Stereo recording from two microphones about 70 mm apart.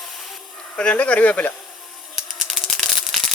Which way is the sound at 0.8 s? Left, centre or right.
Centre.